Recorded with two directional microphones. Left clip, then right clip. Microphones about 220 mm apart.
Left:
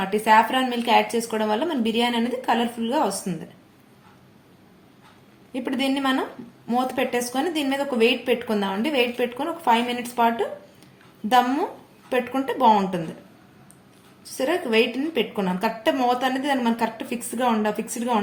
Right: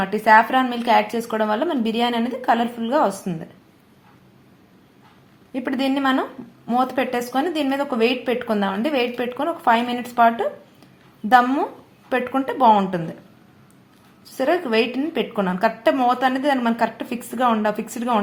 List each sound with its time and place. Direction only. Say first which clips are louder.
0.0 s speech: right 3 dB; 25° right (ahead or behind)
5.5 s a woman's voice: right 2 dB; 25° right (ahead or behind)
14.3 s speech: right 2 dB; 25° right (ahead or behind)